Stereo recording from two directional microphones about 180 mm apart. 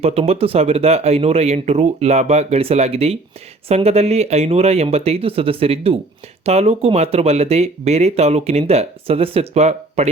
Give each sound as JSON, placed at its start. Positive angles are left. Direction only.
{"t": 0.0, "sound": "speech", "side_deg": -35}